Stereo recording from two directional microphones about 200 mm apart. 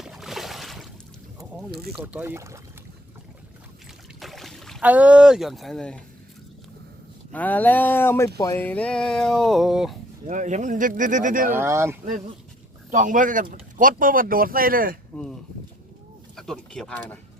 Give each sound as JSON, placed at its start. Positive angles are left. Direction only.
{"t": 0.0, "sound": "a sound", "side_deg": 0}
{"t": 1.9, "sound": "speech", "side_deg": -10}
{"t": 4.2, "sound": "speech", "side_deg": 0}
{"t": 7.3, "sound": "speech", "side_deg": 10}
{"t": 10.2, "sound": "speech", "side_deg": -35}
{"t": 11.5, "sound": "speech", "side_deg": -15}
{"t": 12.9, "sound": "speech", "side_deg": -40}
{"t": 15.1, "sound": "speech", "side_deg": 0}